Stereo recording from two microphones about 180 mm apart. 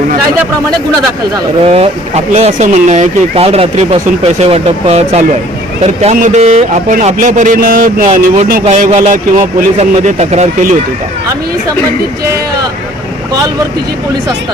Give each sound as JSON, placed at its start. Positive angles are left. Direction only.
{"t": 1.6, "sound": "a man's voice", "side_deg": -35}